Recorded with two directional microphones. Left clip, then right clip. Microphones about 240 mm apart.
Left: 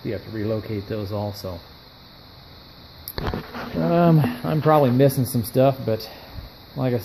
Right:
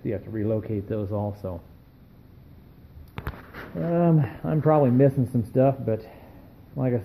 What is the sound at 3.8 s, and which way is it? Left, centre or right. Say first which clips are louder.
Speech: left 5 dB; left.